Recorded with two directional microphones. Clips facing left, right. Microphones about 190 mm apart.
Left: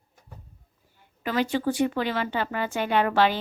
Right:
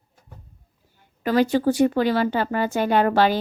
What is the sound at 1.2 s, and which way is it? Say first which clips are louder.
Speech: right 6 dB; 40° right (ahead or behind).